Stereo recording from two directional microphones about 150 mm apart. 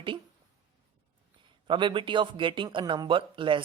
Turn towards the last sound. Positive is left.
turn(degrees=-35)  # may be behind; listen again after turning